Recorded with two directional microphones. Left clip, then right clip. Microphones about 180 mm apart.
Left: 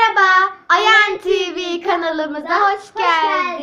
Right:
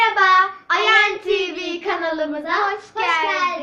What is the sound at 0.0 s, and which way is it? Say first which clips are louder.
Child singing: left 2 dB; 50° left (ahead or behind).